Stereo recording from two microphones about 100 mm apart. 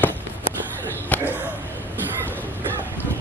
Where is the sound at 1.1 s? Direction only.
15° left (ahead or behind).